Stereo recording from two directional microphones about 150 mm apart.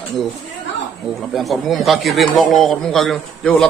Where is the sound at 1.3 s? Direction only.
Centre (ahead or behind).